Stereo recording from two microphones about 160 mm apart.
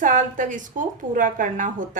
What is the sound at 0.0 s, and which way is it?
A woman's voice, 55° right (ahead or behind).